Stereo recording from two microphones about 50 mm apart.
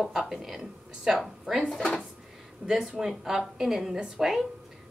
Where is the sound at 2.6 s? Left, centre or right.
Centre.